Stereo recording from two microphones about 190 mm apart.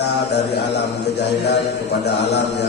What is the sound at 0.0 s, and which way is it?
A man's voice, 60° left (ahead or behind).